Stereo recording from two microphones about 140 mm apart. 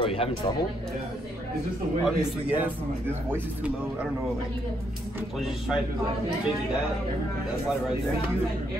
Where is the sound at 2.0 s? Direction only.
10° right (ahead or behind).